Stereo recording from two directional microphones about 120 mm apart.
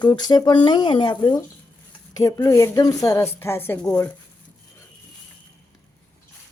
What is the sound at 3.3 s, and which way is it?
Speech, 20° left (ahead or behind).